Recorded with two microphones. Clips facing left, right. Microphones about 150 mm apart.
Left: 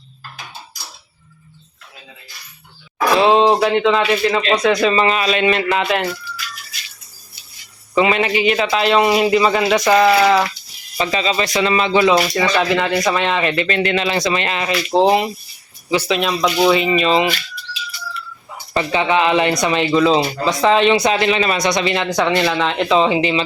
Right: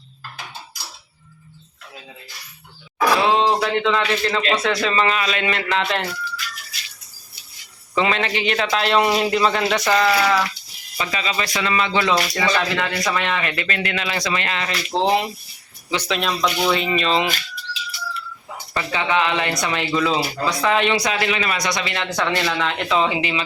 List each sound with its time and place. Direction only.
3.1 s speech: 20° left (ahead or behind)
5.6 s a man's voice: 10° left (ahead or behind)
7.9 s a man's voice: 10° left (ahead or behind)
10.2 s speech: 25° left (ahead or behind)
15.9 s speech: 5° left (ahead or behind)
18.7 s speech: 20° left (ahead or behind)